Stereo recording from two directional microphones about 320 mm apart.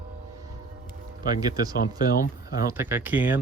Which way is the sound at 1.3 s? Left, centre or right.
Centre.